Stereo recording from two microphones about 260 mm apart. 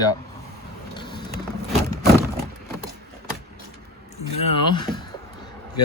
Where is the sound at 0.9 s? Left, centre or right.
Centre.